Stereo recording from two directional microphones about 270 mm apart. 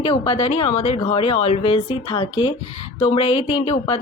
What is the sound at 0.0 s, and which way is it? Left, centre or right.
Speech, left.